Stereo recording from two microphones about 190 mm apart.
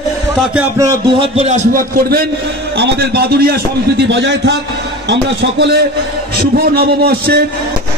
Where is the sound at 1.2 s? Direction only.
35° right (ahead or behind).